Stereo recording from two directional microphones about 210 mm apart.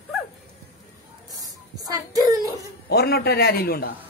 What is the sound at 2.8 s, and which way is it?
Speech, 50° left (ahead or behind).